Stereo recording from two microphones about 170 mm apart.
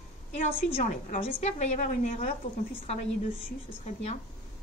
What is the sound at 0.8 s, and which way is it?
A woman's voice, 50° left (ahead or behind).